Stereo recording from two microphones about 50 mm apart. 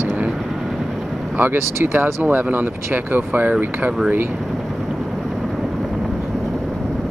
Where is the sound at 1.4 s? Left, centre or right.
Right.